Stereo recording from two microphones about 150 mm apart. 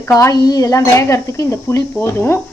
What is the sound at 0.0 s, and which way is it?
A woman's voice, 20° left (ahead or behind).